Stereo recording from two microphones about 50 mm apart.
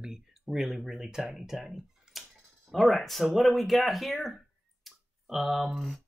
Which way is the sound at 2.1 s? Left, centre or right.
Centre.